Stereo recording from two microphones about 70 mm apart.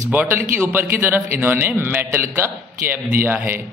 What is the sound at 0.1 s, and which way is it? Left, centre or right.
A man's voice, right.